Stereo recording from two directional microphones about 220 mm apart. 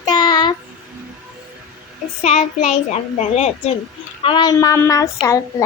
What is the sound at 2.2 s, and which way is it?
A child's voice, 30° left (ahead or behind).